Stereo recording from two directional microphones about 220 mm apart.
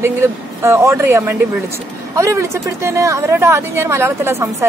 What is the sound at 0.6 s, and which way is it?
Speech, 10° right (ahead or behind).